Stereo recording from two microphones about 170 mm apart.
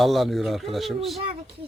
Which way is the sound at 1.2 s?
35° right (ahead or behind).